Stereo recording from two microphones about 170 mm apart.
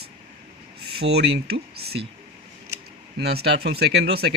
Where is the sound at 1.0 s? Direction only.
75° right (ahead or behind).